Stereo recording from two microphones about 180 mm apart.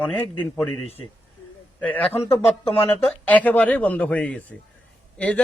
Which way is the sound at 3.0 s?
10° left (ahead or behind).